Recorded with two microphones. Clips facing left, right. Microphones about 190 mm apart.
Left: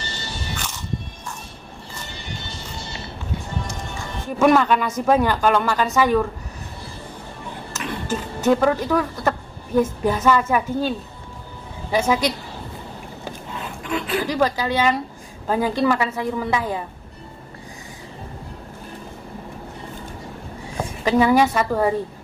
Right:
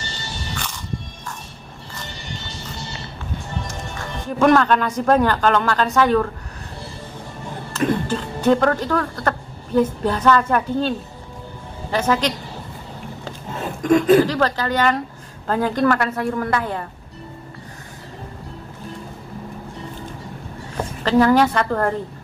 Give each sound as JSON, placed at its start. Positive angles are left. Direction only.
{"t": 4.4, "sound": "a woman's voice", "side_deg": 5}
{"t": 8.5, "sound": "a woman's voice", "side_deg": 10}
{"t": 13.5, "sound": "a sound", "side_deg": -45}
{"t": 14.2, "sound": "a woman's voice", "side_deg": 10}
{"t": 20.7, "sound": "a woman's voice", "side_deg": 10}